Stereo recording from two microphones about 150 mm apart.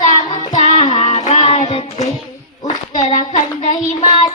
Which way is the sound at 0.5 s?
50° left (ahead or behind).